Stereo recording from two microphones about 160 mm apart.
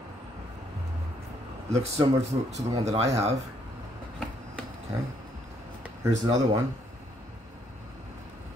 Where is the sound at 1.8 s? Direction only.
45° right (ahead or behind).